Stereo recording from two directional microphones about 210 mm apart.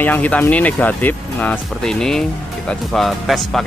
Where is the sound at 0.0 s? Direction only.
10° left (ahead or behind).